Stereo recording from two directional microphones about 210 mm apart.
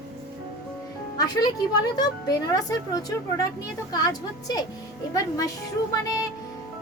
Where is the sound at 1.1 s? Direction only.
20° left (ahead or behind).